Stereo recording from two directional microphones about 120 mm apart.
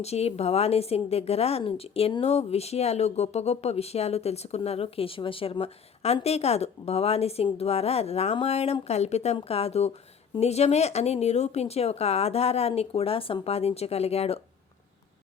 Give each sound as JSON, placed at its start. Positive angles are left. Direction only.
{"t": 0.0, "sound": "a woman's voice", "side_deg": 60}